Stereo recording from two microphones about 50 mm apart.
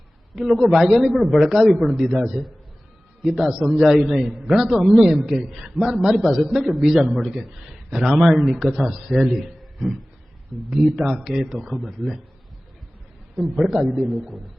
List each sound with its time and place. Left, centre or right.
0.3 s a man's voice: centre
13.3 s a man's voice: centre